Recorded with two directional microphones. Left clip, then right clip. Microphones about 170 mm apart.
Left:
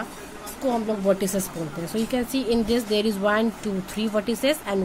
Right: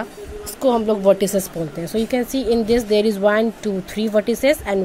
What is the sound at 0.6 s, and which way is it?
A woman's voice, 40° right (ahead or behind).